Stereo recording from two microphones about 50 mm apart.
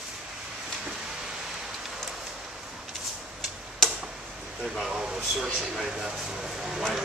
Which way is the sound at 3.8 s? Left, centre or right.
Centre.